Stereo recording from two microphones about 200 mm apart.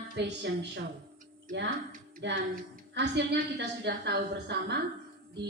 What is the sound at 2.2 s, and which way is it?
A woman's voice, 60° right (ahead or behind).